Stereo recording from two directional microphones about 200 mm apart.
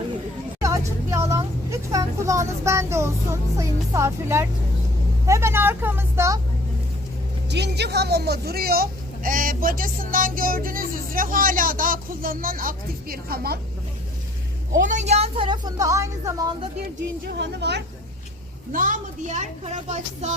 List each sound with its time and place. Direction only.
0.6 s speech: 15° right (ahead or behind)
7.5 s speech: 55° right (ahead or behind)
14.8 s a woman's voice: 40° right (ahead or behind); by 16.5 s 15° right (ahead or behind)
17.2 s speech: 55° right (ahead or behind)
18.7 s speech: 40° right (ahead or behind)